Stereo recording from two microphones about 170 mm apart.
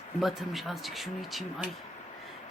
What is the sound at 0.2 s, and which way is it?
Speech, centre (ahead or behind).